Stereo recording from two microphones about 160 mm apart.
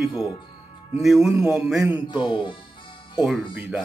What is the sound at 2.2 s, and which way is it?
Speech, 30° left (ahead or behind).